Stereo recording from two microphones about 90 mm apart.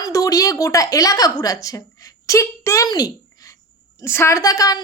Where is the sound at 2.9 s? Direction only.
45° left (ahead or behind).